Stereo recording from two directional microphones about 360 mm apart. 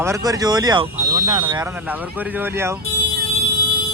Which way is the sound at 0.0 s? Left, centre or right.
Centre.